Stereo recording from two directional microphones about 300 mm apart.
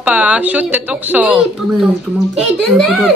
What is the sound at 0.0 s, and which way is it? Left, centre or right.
A child's voice, centre.